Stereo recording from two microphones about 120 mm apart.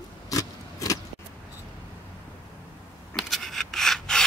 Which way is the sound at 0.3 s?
30° left (ahead or behind).